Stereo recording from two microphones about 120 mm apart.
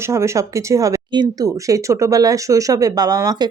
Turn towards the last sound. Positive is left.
turn(degrees=-30)  # may be behind; listen again after turning